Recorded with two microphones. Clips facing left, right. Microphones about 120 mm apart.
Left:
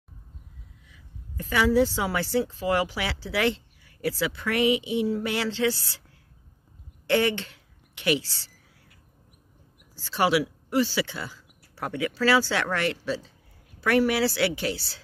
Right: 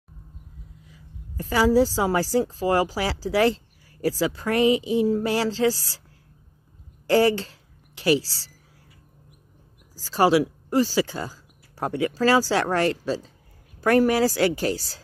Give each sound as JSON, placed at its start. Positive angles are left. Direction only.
{"t": 0.8, "sound": "a woman's voice", "side_deg": -35}
{"t": 7.1, "sound": "a woman's voice", "side_deg": -35}
{"t": 9.9, "sound": "a woman's voice", "side_deg": -40}